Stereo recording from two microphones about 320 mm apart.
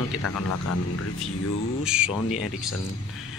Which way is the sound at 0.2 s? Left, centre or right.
Left.